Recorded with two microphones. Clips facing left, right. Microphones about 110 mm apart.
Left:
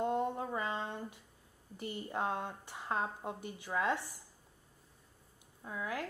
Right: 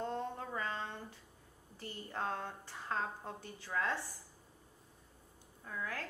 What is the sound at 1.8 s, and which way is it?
A woman's voice, 15° left (ahead or behind).